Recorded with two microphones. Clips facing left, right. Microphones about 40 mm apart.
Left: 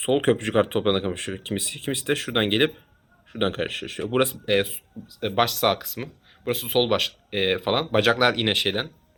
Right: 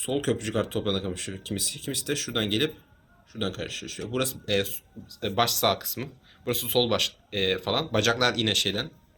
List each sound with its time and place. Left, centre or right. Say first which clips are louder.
0.0 s speech: left 6 dB; left